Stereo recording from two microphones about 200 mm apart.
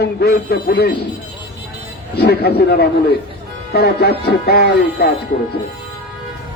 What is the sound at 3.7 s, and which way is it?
A man's voice, 55° left (ahead or behind).